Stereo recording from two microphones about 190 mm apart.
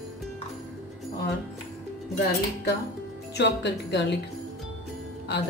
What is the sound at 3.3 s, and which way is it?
Speech, 65° left (ahead or behind).